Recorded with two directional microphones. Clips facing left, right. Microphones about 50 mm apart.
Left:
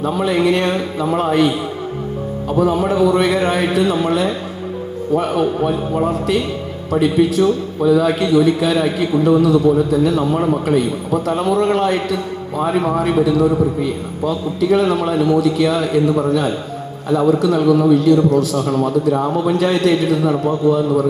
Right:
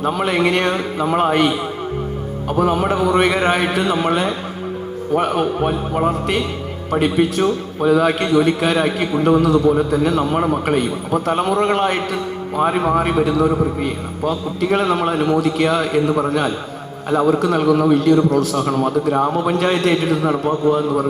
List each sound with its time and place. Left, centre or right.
0.0 s a man's voice: right
2.5 s a man's voice: right